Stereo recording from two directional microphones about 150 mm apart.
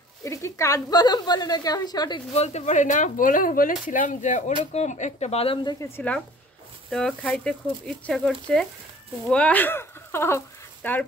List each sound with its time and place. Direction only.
0.2 s a woman's voice: 20° left (ahead or behind)
2.3 s speech: 45° left (ahead or behind)
5.9 s speech: 10° left (ahead or behind)